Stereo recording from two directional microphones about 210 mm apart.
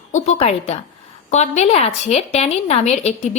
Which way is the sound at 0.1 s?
30° left (ahead or behind).